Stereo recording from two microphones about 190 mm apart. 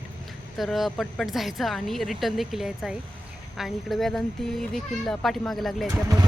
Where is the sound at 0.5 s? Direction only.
Centre (ahead or behind).